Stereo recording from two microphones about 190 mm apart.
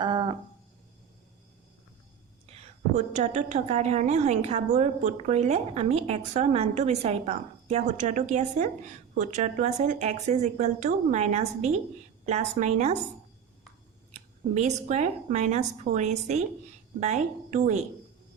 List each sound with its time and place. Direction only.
0.0 s a sound: 25° right (ahead or behind)
2.5 s a woman's voice: 40° right (ahead or behind)
14.1 s a woman's voice: 40° right (ahead or behind)